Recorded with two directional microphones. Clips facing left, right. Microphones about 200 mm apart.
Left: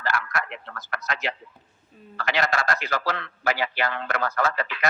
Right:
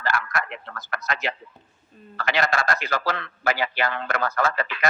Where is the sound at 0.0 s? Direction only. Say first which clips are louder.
Right 1 dB; 50° right (ahead or behind).